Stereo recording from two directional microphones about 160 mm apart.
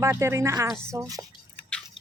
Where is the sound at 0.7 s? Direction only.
5° left (ahead or behind).